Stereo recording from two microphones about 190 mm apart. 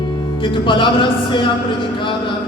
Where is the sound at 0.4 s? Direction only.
25° left (ahead or behind).